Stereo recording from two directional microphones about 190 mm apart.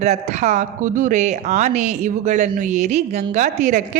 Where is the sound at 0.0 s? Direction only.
40° right (ahead or behind).